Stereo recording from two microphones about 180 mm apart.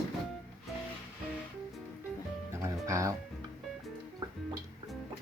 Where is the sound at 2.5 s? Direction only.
15° right (ahead or behind).